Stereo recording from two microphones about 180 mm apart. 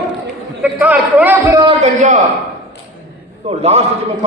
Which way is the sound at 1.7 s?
40° right (ahead or behind).